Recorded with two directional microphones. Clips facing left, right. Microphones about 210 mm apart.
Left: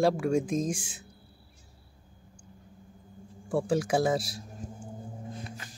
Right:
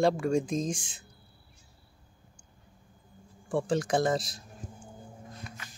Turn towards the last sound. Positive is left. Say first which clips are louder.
# left 3 dB
turn(degrees=35)  # may be behind; listen again after turning